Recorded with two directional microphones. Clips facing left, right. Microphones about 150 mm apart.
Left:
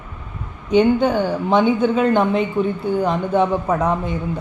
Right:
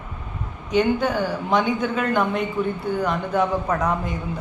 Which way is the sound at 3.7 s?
5° left (ahead or behind).